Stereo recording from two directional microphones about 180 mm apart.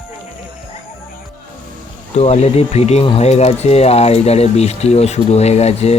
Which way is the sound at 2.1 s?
35° left (ahead or behind).